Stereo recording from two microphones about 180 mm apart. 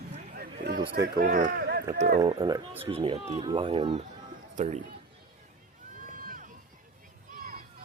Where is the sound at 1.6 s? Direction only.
65° right (ahead or behind).